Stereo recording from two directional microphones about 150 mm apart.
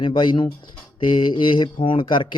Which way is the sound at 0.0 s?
30° left (ahead or behind).